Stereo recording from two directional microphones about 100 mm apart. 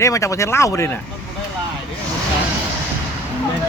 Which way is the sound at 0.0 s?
30° left (ahead or behind).